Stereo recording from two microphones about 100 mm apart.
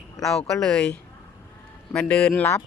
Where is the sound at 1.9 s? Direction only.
10° left (ahead or behind).